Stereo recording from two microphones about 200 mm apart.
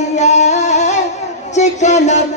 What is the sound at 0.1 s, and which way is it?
Music, 35° left (ahead or behind).